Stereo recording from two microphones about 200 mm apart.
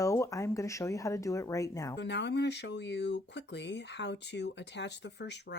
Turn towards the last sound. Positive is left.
turn(degrees=60)  # may be behind; listen again after turning